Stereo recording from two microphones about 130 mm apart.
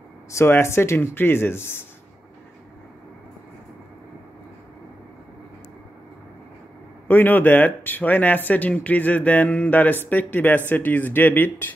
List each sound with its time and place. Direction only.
0.4 s speech: 20° left (ahead or behind)
7.1 s speech: 15° left (ahead or behind)